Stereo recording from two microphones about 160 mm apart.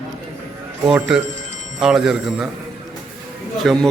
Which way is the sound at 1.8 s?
5° right (ahead or behind).